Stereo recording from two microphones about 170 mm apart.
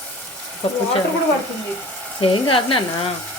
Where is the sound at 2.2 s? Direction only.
30° left (ahead or behind).